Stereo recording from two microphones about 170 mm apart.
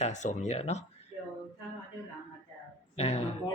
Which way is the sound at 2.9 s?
35° left (ahead or behind).